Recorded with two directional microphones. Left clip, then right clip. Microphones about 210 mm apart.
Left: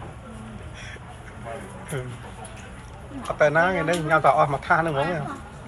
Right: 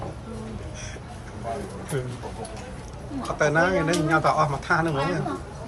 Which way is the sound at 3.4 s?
10° right (ahead or behind).